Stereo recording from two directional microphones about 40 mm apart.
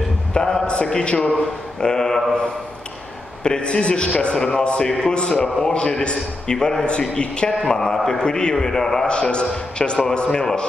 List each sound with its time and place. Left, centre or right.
0.3 s a sound: centre
0.8 s a man's voice: left
1.8 s a man's voice: centre
3.4 s a man's voice: left
7.6 s a man's voice: centre
8.2 s a man's voice: left
9.1 s a man's voice: left